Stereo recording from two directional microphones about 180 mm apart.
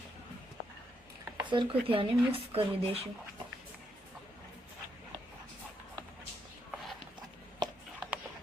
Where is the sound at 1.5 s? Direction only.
30° right (ahead or behind).